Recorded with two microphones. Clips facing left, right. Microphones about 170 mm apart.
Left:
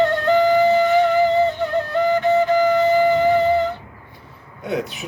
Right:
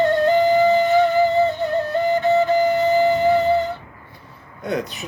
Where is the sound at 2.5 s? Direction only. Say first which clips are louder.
Left 1 dB; 15° left (ahead or behind).